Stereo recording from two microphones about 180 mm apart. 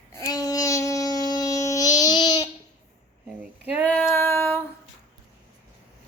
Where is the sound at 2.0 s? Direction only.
20° left (ahead or behind).